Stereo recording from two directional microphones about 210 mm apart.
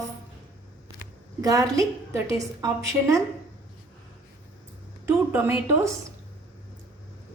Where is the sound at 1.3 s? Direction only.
15° right (ahead or behind).